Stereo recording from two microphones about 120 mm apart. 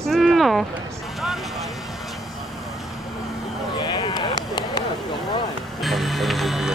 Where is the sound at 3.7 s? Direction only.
35° left (ahead or behind).